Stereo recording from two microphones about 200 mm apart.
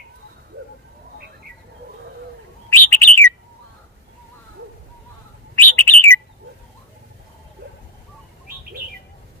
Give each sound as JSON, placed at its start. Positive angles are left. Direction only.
{"t": 2.7, "sound": "bird", "side_deg": 10}
{"t": 5.6, "sound": "bird", "side_deg": 10}
{"t": 7.6, "sound": "a sound", "side_deg": -55}